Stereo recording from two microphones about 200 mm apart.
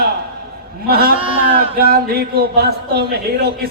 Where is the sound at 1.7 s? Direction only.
50° right (ahead or behind).